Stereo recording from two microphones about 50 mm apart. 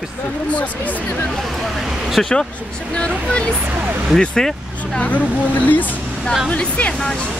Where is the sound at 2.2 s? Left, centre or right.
Centre.